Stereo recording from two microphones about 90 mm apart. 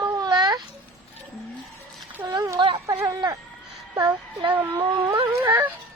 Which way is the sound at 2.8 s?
35° right (ahead or behind).